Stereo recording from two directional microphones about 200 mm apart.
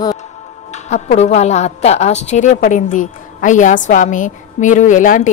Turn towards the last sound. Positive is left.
turn(degrees=40)  # may be behind; listen again after turning